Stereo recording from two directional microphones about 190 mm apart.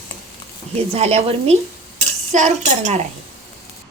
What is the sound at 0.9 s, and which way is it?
Speech, 35° right (ahead or behind).